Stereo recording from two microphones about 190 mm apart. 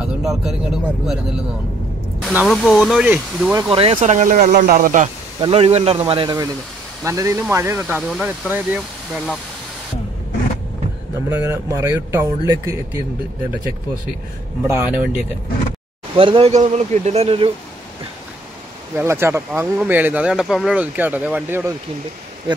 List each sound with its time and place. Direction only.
0.0 s speech: centre (ahead or behind)
2.2 s speech: centre (ahead or behind)
3.7 s speech: 30° right (ahead or behind)
5.4 s speech: 30° right (ahead or behind)
7.1 s speech: 15° right (ahead or behind)
11.2 s speech: 10° right (ahead or behind)
14.6 s speech: 10° right (ahead or behind)
16.2 s speech: 30° right (ahead or behind)
18.9 s speech: 15° right (ahead or behind)